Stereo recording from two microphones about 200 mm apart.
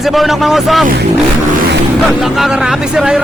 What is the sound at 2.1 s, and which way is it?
A man's voice, centre (ahead or behind).